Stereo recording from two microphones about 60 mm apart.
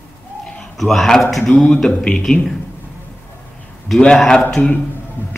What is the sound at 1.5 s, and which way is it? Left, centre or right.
Speech, left.